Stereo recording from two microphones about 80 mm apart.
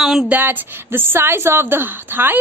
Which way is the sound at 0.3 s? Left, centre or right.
Right.